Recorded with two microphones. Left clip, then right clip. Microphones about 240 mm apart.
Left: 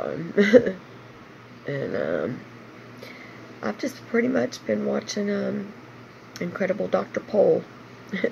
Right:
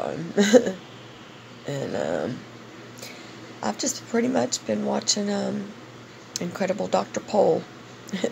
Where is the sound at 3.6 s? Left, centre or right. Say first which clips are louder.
Right 2 dB; centre.